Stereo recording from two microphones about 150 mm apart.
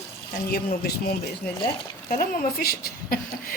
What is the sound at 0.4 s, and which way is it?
Speech, 90° left.